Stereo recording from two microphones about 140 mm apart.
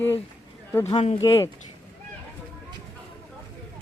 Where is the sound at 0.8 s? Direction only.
45° left (ahead or behind).